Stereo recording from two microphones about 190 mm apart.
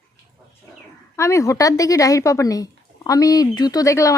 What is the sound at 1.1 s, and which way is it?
A woman's voice, 15° left (ahead or behind).